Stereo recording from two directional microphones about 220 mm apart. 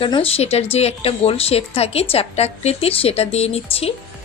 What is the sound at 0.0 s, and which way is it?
A woman's voice, 25° left (ahead or behind).